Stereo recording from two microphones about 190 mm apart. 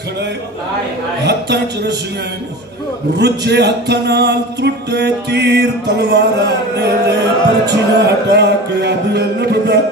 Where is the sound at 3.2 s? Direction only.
60° right (ahead or behind).